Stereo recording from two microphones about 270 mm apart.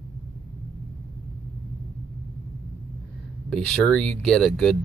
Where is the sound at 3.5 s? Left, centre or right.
Centre.